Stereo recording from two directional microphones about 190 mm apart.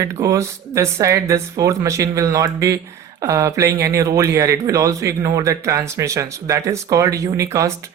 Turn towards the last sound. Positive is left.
turn(degrees=-15)  # may be behind; listen again after turning